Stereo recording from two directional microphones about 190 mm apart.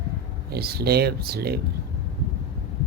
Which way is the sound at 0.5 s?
55° right (ahead or behind).